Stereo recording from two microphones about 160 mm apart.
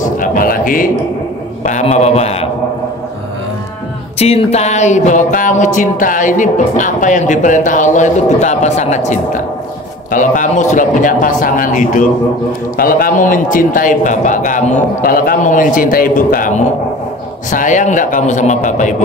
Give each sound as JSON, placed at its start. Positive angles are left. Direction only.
{"t": 0.0, "sound": "a sound", "side_deg": 55}
{"t": 1.6, "sound": "speech", "side_deg": 50}
{"t": 4.2, "sound": "speech", "side_deg": 40}
{"t": 12.7, "sound": "a man's voice", "side_deg": 65}